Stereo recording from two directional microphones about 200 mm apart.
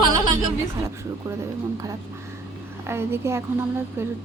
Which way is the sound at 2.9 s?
10° right (ahead or behind).